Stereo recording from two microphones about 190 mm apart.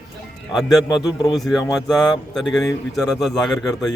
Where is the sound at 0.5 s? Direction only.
Centre (ahead or behind).